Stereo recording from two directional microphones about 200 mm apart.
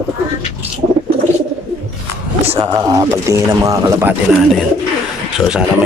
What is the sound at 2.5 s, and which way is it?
Speech, 15° right (ahead or behind).